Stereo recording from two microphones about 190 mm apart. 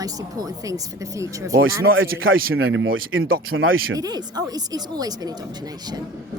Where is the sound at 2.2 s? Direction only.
90° right.